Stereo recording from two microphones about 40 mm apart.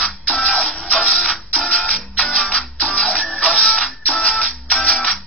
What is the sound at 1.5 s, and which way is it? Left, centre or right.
Music, left.